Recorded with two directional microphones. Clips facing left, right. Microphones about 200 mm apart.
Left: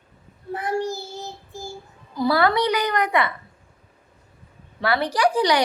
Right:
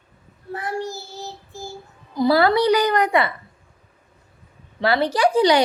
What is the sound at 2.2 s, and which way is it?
A woman's voice, 25° right (ahead or behind).